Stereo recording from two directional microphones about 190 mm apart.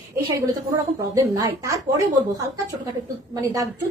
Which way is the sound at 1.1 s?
15° right (ahead or behind).